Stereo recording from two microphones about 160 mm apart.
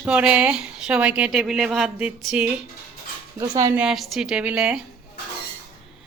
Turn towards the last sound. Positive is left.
turn(degrees=-5)  # may be behind; listen again after turning